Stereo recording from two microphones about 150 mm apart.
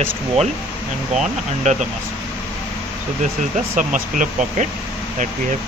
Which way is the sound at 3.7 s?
60° right (ahead or behind).